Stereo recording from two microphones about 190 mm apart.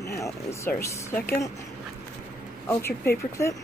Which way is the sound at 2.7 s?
15° left (ahead or behind).